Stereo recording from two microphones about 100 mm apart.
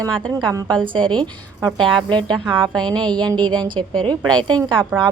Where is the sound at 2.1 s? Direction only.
50° right (ahead or behind).